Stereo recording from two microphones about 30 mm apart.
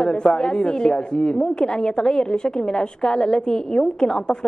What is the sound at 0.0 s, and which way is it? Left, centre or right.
A man's voice, left.